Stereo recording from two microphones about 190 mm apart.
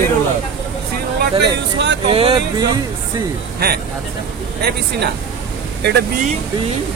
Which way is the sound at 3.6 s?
55° right (ahead or behind).